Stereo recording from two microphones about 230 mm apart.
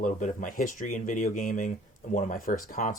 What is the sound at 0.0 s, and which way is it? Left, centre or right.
Speech, left.